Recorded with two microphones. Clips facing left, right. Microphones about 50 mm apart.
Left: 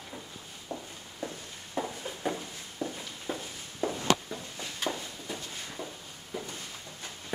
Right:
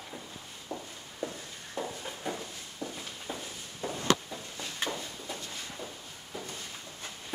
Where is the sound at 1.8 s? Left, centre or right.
Centre.